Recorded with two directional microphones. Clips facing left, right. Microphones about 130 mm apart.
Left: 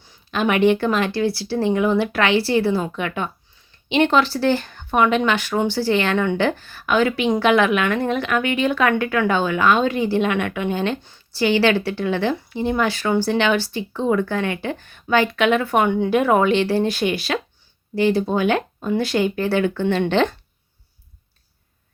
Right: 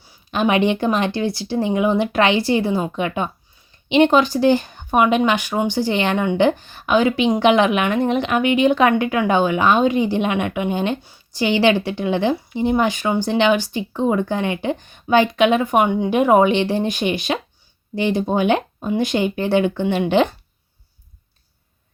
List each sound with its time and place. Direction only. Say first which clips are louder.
0.0 s speech: right 2 dB; 15° right (ahead or behind)